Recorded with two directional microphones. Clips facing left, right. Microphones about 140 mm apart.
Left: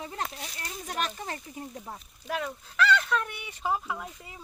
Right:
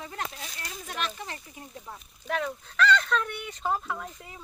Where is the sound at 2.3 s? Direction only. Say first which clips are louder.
Right 2 dB; 5° left (ahead or behind).